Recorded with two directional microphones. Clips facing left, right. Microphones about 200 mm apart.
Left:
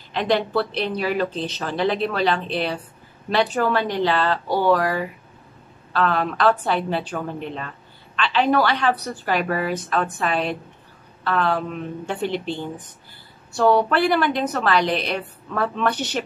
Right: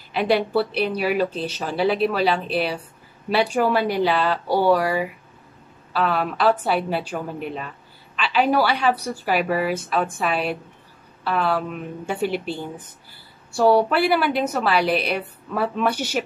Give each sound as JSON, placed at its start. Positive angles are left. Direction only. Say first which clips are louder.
{"t": 0.1, "sound": "a woman's voice", "louder": "right 1 dB", "side_deg": -10}